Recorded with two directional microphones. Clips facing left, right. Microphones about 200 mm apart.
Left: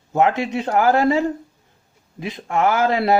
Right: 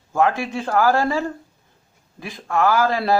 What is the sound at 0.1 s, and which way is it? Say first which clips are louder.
Speech: left 2 dB; 20° left (ahead or behind).